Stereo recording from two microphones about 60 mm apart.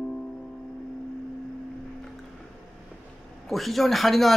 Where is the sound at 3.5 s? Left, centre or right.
Centre.